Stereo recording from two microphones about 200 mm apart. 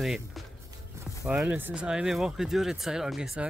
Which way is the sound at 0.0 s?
Centre (ahead or behind).